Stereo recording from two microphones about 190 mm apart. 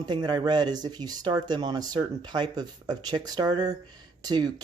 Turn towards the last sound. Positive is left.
turn(degrees=-20)  # may be behind; listen again after turning